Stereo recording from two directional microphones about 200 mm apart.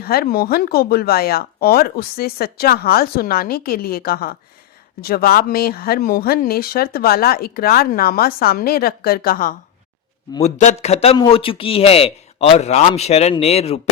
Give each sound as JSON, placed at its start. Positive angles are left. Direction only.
{"t": 0.0, "sound": "speech", "side_deg": 50}
{"t": 10.4, "sound": "a man's voice", "side_deg": 35}